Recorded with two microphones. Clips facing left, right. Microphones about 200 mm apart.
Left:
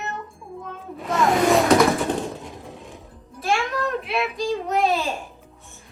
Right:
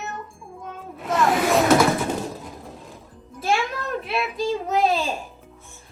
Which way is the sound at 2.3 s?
Centre (ahead or behind).